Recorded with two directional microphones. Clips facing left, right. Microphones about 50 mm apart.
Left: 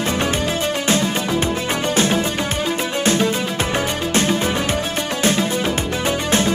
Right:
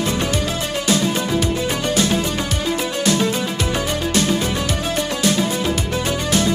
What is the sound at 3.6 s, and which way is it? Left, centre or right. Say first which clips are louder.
Music: left 1 dB; left.